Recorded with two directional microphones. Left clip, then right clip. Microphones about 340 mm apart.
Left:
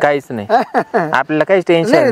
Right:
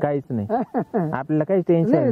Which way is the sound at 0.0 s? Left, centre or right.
Centre.